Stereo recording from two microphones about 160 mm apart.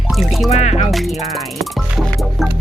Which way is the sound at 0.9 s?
Centre (ahead or behind).